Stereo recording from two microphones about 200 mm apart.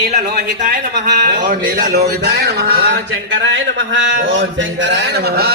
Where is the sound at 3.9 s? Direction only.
70° right (ahead or behind); by 5.5 s 50° right (ahead or behind).